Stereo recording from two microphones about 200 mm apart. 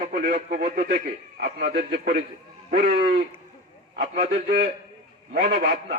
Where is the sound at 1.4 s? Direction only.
55° right (ahead or behind); by 4.3 s 35° right (ahead or behind).